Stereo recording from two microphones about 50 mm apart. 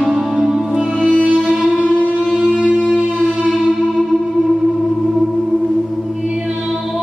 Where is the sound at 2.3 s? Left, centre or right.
Centre.